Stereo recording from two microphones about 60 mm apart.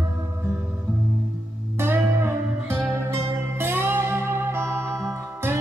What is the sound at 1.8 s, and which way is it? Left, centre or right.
Music, right.